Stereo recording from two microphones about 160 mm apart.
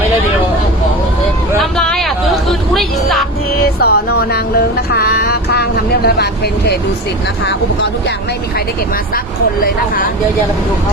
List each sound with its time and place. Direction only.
1.8 s a sound: 5° left (ahead or behind)
3.8 s music: 80° left
9.6 s speech: 65° left (ahead or behind)